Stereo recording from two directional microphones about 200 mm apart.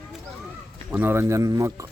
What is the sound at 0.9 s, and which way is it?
Speech, 10° right (ahead or behind).